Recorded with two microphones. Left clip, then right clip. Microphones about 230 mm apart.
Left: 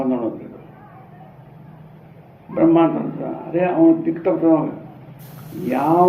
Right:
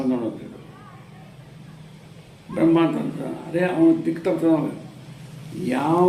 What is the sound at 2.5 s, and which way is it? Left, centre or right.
A man's voice, right.